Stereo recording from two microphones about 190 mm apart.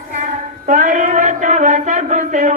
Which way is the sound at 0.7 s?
40° right (ahead or behind).